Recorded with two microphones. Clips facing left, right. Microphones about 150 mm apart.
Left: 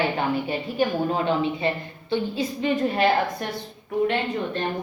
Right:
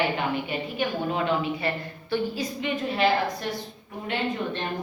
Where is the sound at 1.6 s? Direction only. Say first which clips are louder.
Left 3 dB; 25° left (ahead or behind).